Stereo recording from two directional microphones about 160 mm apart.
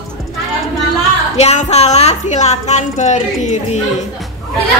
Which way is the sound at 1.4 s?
40° left (ahead or behind).